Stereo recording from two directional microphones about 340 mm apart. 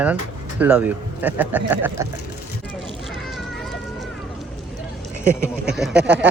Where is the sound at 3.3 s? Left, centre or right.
Centre.